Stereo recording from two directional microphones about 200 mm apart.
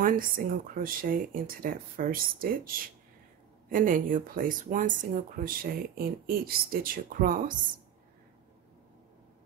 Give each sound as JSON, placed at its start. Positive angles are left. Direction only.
{"t": 0.0, "sound": "speech", "side_deg": -45}